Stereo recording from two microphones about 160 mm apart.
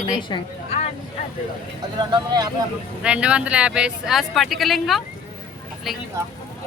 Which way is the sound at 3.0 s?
5° right (ahead or behind).